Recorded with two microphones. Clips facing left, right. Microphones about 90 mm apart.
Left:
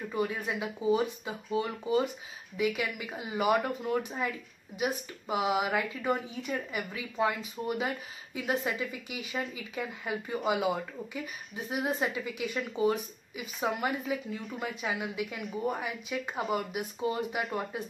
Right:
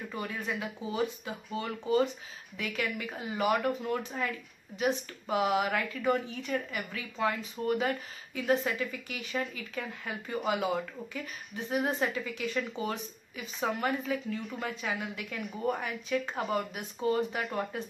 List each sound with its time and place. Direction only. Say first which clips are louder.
0.1 s speech: left 4 dB; 15° left (ahead or behind)